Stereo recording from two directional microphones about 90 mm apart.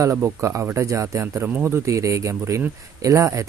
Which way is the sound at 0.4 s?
30° right (ahead or behind).